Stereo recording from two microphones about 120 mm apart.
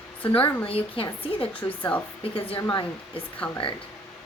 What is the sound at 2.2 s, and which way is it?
Speech, 50° left (ahead or behind).